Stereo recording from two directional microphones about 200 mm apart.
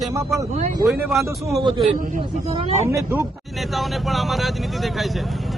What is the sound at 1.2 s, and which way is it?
Speech, 15° right (ahead or behind).